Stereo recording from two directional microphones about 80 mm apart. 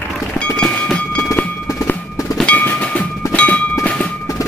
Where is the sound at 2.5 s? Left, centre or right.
Centre.